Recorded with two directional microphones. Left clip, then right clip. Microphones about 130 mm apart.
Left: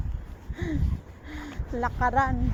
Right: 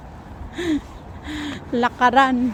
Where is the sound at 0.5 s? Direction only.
35° right (ahead or behind).